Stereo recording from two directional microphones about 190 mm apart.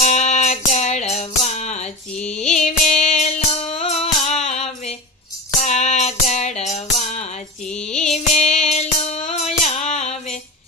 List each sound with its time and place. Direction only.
0.0 s music: 35° left (ahead or behind)
7.7 s music: 5° left (ahead or behind)
7.9 s music: 35° left (ahead or behind)